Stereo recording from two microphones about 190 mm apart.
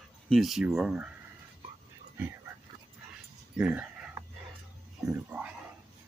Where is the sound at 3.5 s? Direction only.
5° right (ahead or behind).